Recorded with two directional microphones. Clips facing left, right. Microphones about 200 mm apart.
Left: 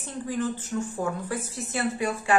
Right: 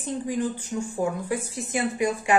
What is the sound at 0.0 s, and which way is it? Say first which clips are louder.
A woman's voice: right 2 dB; 15° right (ahead or behind).